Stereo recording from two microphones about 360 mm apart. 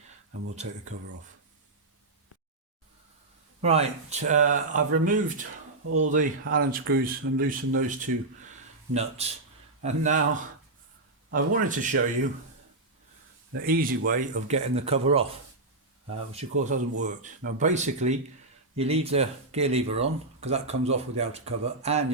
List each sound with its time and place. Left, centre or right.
0.5 s speech: centre
3.6 s speech: centre
11.3 s speech: right
13.5 s speech: right
16.3 s speech: centre